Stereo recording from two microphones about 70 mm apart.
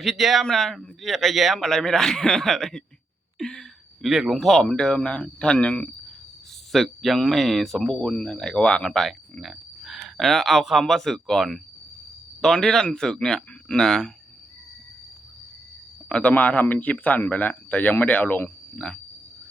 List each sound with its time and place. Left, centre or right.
0.0 s speech: centre
3.3 s a sound: centre
4.1 s speech: centre
6.7 s speech: centre
16.0 s speech: centre
18.8 s speech: centre